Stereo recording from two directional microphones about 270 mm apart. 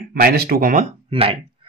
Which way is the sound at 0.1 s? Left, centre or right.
Right.